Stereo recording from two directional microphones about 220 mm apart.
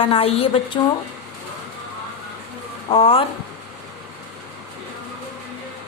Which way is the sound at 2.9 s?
25° left (ahead or behind).